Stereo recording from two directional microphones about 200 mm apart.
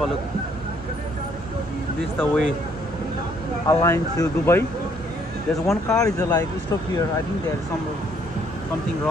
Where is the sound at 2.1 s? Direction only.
5° left (ahead or behind).